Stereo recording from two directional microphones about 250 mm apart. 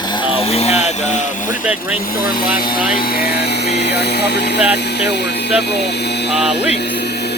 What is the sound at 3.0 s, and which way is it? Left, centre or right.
Speech, left.